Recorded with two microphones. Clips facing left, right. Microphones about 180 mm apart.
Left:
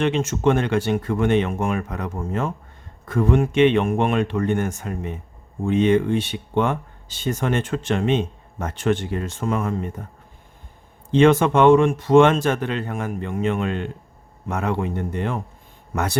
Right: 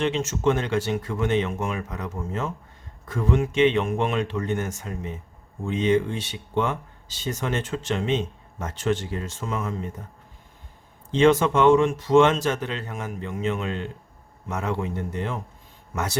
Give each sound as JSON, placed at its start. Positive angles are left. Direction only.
{"t": 0.0, "sound": "speech", "side_deg": 55}
{"t": 11.1, "sound": "speech", "side_deg": 55}